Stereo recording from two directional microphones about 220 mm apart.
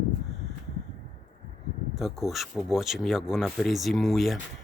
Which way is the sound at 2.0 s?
Centre (ahead or behind).